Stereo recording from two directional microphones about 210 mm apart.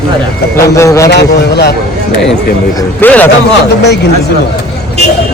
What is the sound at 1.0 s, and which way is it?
Speech, 50° left (ahead or behind).